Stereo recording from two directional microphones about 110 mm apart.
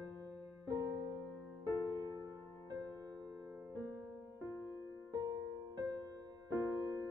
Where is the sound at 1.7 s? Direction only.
30° right (ahead or behind).